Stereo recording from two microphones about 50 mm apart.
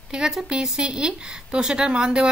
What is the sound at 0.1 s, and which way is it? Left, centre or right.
A woman's voice, centre.